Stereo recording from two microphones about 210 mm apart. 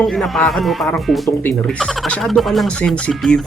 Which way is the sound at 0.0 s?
Centre (ahead or behind).